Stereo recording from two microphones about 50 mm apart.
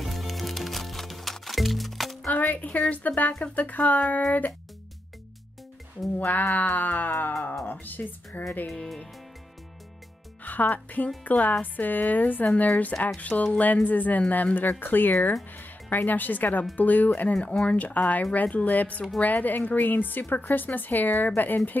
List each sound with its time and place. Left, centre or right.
0.0 s music: centre
2.2 s speech: left
6.1 s speech: left
8.6 s music: centre
10.4 s speech: left
17.2 s speech: left